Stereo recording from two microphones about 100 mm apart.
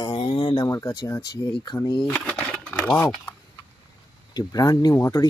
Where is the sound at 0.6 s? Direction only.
35° left (ahead or behind).